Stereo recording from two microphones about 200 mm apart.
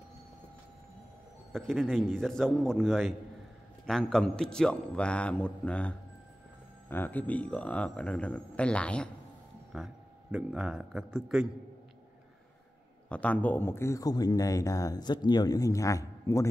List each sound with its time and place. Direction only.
1.5 s speech: centre (ahead or behind)
13.1 s speech: 5° left (ahead or behind)